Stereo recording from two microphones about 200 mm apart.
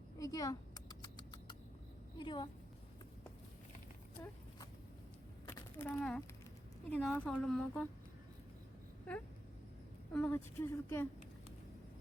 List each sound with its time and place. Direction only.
0.2 s rodents: 15° left (ahead or behind)
2.1 s a woman's voice: 25° left (ahead or behind)
4.2 s a woman's voice: 15° left (ahead or behind)
5.5 s a sound: 15° left (ahead or behind)
6.9 s a woman's voice: 5° left (ahead or behind)
10.1 s a woman's voice: 5° left (ahead or behind)